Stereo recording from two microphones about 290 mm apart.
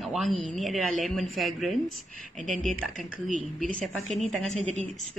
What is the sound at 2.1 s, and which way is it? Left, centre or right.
Speech, right.